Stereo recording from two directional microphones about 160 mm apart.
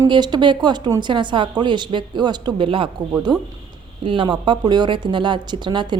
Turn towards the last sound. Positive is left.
turn(degrees=-30)  # may be behind; listen again after turning